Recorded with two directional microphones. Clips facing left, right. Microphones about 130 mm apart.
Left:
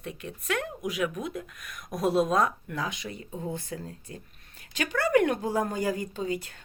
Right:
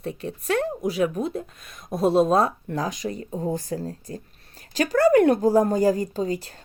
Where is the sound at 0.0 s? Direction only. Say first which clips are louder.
Right 7 dB; 35° right (ahead or behind).